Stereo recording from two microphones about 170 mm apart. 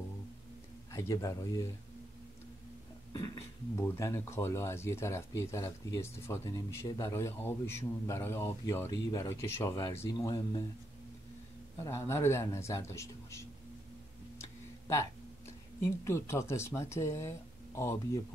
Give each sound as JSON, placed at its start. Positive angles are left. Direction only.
{"t": 0.9, "sound": "speech", "side_deg": 20}
{"t": 3.1, "sound": "speech", "side_deg": 15}
{"t": 11.8, "sound": "speech", "side_deg": 15}
{"t": 14.4, "sound": "tick-tock", "side_deg": 15}
{"t": 15.8, "sound": "speech", "side_deg": 15}